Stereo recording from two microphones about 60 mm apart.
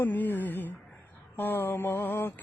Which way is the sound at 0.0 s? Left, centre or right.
Left.